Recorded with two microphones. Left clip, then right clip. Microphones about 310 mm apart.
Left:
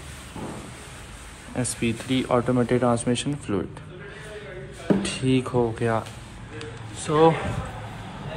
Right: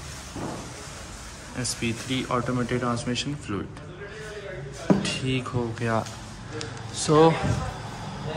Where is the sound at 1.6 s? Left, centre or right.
Centre.